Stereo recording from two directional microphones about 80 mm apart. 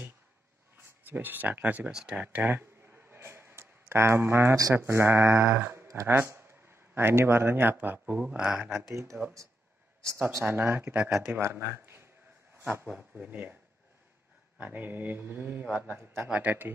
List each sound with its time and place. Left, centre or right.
0.7 s speech: right
1.9 s speech: centre
2.2 s a sound: right
4.7 s speech: right
8.2 s speech: centre
8.9 s speech: right
10.4 s speech: right
11.3 s speech: right
14.6 s speech: right
16.3 s speech: centre